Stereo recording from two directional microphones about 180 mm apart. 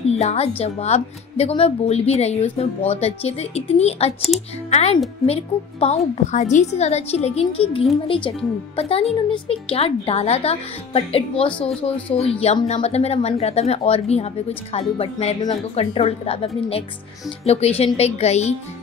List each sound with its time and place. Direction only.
0.2 s a woman's voice: 35° left (ahead or behind)
4.3 s speech: centre (ahead or behind)
4.6 s a child's voice: 35° left (ahead or behind)